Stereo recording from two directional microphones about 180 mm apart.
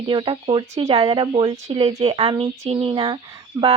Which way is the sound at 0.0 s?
25° right (ahead or behind).